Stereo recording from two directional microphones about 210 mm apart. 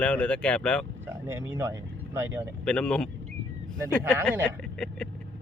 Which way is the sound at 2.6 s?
5° left (ahead or behind).